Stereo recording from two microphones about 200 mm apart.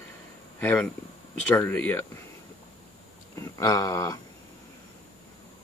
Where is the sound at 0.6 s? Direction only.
10° left (ahead or behind).